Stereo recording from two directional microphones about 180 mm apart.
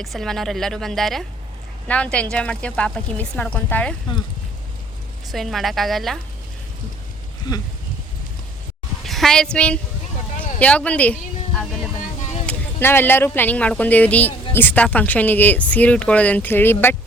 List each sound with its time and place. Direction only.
0.0 s a woman's voice: centre (ahead or behind)
5.3 s a woman's voice: centre (ahead or behind)
7.5 s speech: 20° left (ahead or behind)
9.0 s a woman's voice: centre (ahead or behind)